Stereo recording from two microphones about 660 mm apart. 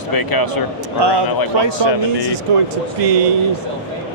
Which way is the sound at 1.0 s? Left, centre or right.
Right.